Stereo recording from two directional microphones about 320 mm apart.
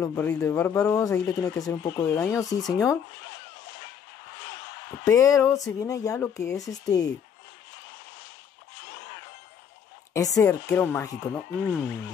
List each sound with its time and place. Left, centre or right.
0.0 s speech: centre
5.0 s speech: centre
10.1 s speech: centre